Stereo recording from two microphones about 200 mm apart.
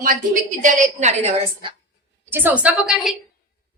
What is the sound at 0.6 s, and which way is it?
A woman's voice, 35° right (ahead or behind).